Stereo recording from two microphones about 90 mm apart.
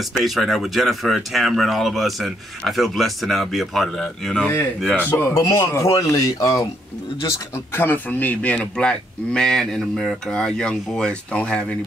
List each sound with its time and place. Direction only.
0.2 s speech: centre (ahead or behind)
5.6 s speech: 35° left (ahead or behind)
7.2 s speech: 30° left (ahead or behind); by 11.6 s 10° left (ahead or behind)